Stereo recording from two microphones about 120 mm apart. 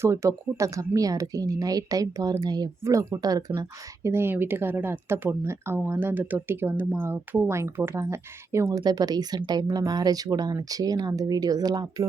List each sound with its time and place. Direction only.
0.0 s speech: 25° right (ahead or behind)
4.1 s speech: 20° right (ahead or behind); by 12.0 s 35° right (ahead or behind)